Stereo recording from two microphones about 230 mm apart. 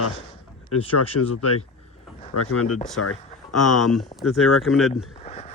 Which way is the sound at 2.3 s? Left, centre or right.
Left.